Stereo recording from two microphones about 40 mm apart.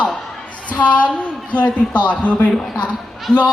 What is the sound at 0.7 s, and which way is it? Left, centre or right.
Speech, left.